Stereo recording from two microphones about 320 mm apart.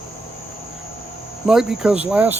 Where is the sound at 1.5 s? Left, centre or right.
Centre.